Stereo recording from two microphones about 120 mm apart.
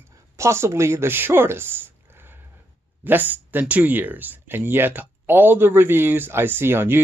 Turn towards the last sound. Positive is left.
turn(degrees=-20)  # may be behind; listen again after turning